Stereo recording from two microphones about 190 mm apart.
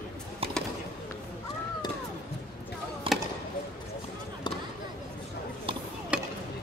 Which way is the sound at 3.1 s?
30° right (ahead or behind).